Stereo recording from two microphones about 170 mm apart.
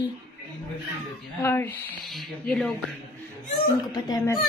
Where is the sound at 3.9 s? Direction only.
25° left (ahead or behind).